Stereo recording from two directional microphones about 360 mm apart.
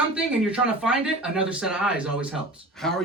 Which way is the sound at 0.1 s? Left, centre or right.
Centre.